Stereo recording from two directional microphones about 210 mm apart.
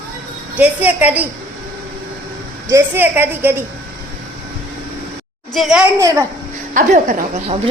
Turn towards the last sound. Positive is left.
turn(degrees=-35)  # may be behind; listen again after turning